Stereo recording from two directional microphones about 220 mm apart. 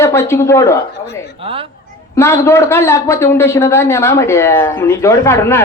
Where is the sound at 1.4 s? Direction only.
25° right (ahead or behind).